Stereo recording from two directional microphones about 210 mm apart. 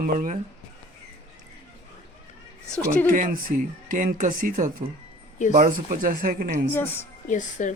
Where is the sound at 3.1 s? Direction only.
40° right (ahead or behind).